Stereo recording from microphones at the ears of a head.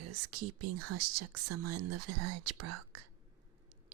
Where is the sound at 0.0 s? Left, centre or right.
Right.